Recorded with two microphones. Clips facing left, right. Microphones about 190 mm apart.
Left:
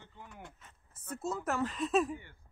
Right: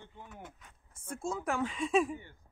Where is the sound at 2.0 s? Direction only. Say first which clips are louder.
Even; 15° right (ahead or behind).